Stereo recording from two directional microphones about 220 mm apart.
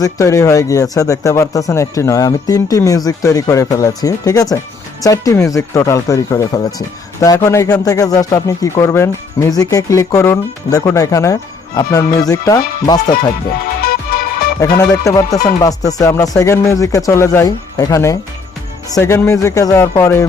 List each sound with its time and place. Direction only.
0.0 s speech: 15° left (ahead or behind)
13.8 s music: 40° left (ahead or behind)
14.8 s speech: 15° left (ahead or behind)